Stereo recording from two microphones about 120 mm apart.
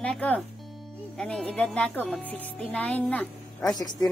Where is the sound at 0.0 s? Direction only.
10° left (ahead or behind).